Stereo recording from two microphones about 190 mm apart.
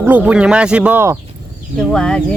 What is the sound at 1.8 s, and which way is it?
Speech, 5° left (ahead or behind).